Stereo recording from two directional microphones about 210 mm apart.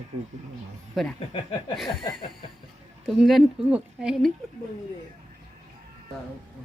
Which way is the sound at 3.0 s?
Centre (ahead or behind).